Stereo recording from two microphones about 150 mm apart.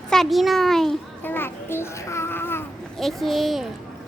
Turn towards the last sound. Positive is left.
turn(degrees=0)  # may be behind; listen again after turning